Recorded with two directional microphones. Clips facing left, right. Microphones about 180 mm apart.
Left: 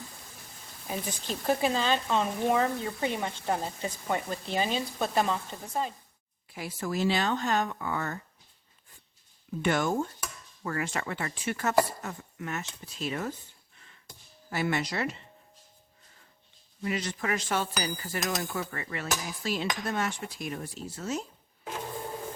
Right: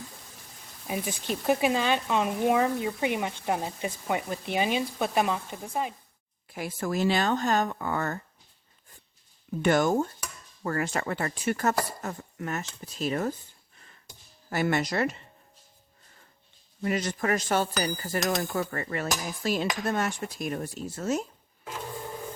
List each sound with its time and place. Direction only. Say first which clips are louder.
0.9 s speech: right 3 dB; 15° right (ahead or behind)
6.5 s cutlery: right 3 dB; 50° right (ahead or behind)
9.6 s speech: right 4 dB; 40° right (ahead or behind)
14.5 s cutlery: right 3 dB; 45° right (ahead or behind)
16.8 s cutlery: right 4 dB; 45° right (ahead or behind)